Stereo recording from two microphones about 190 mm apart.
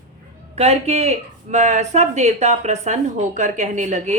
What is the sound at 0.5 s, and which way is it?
A woman's voice, 35° right (ahead or behind).